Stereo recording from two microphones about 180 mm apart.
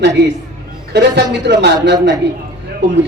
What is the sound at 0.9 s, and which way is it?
Speech, 75° right (ahead or behind).